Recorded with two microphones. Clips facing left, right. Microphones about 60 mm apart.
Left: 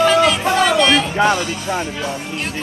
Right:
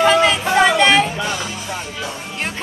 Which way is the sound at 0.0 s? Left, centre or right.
Right.